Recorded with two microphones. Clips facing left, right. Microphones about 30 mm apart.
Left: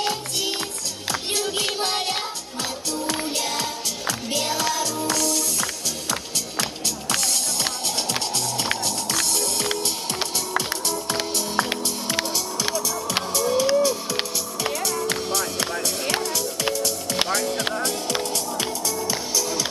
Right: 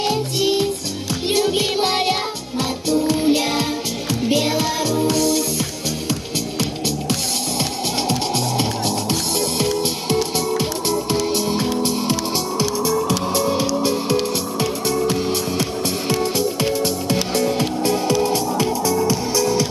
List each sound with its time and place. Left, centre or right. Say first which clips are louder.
0.0 s music: right 6 dB; centre
10.6 s music: right 6 dB; right
17.3 s music: right 4 dB; right